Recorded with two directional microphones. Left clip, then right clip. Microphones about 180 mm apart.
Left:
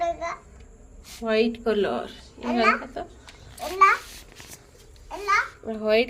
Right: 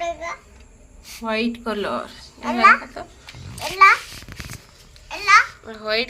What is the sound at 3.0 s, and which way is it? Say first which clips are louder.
Speech: even; 35° left (ahead or behind).